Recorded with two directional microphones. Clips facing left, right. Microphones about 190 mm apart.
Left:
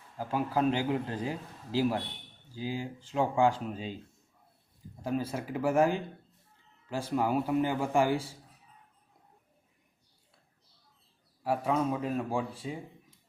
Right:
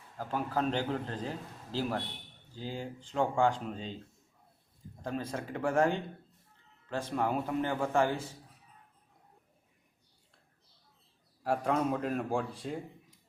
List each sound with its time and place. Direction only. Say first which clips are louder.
0.2 s a man's voice: left 3 dB; 10° left (ahead or behind)
5.0 s a man's voice: left 4 dB; 5° left (ahead or behind)
11.4 s a man's voice: left 1 dB; centre (ahead or behind)